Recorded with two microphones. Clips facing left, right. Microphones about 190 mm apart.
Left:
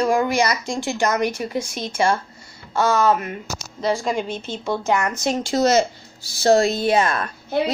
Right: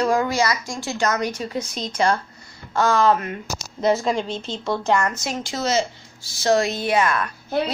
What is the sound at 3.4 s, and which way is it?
Speech, 5° right (ahead or behind).